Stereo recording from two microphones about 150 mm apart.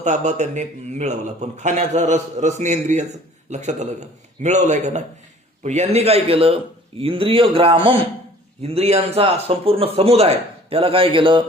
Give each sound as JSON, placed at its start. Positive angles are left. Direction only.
{"t": 0.0, "sound": "a man's voice", "side_deg": -55}